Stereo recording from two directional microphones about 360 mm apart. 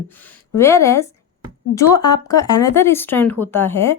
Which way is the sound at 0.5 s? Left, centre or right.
Centre.